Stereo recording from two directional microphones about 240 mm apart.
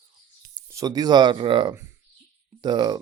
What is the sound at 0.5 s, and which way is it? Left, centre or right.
Speech, centre.